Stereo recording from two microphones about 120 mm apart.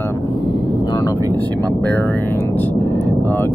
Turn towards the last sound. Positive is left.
turn(degrees=20)  # may be behind; listen again after turning